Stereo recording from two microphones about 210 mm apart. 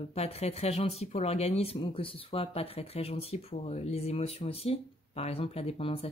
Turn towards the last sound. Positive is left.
turn(degrees=25)  # may be behind; listen again after turning